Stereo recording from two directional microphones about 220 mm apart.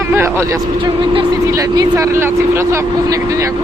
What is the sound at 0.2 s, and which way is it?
Speech, 10° right (ahead or behind).